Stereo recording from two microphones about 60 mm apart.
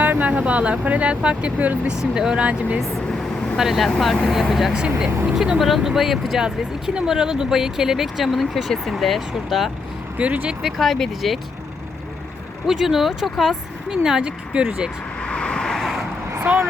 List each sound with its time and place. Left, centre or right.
0.0 s speech: right
2.0 s speech: centre
3.6 s speech: centre
4.8 s speech: centre
10.2 s speech: right
10.6 s speech: centre
12.6 s speech: centre
13.9 s speech: centre
15.2 s vehicle: centre
16.4 s speech: right